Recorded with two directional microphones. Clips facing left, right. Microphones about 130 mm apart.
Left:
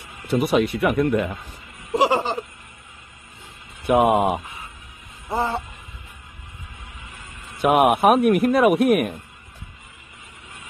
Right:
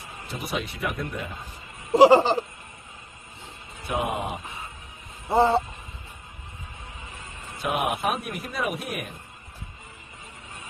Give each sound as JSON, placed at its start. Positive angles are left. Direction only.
{"t": 0.3, "sound": "a man's voice", "side_deg": 65}
{"t": 1.9, "sound": "laughter", "side_deg": -30}
{"t": 3.8, "sound": "speech", "side_deg": 65}
{"t": 5.3, "sound": "laughter", "side_deg": -25}
{"t": 7.6, "sound": "a man's voice", "side_deg": 60}